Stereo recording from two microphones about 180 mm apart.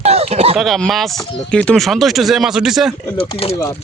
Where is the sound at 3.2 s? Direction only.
30° left (ahead or behind).